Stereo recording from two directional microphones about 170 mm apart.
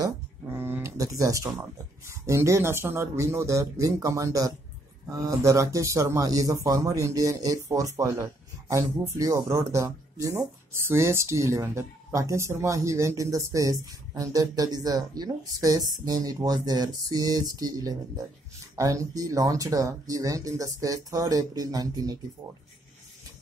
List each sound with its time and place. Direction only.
0.0 s speech: 15° right (ahead or behind)